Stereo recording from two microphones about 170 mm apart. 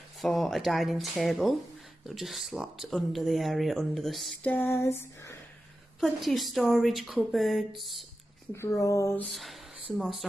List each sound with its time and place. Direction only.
0.2 s speech: centre (ahead or behind)
5.9 s speech: centre (ahead or behind)
8.5 s speech: 15° left (ahead or behind)
9.3 s speech: centre (ahead or behind)